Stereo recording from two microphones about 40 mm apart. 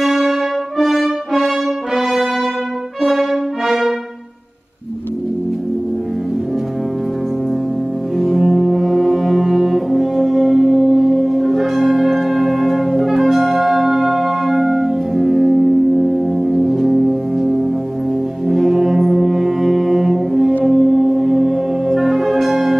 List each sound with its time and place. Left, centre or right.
0.0 s brass instrument: centre
3.0 s brass instrument: centre
8.2 s music: centre
10.6 s singing bowl: centre
12.0 s music: centre
18.5 s brass instrument: centre
20.6 s music: centre
22.5 s music: right